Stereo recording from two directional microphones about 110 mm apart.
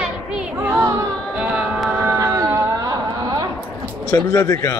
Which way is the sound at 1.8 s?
10° right (ahead or behind).